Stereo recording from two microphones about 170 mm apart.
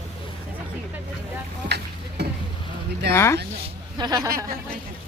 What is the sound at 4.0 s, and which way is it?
Speech, 20° right (ahead or behind).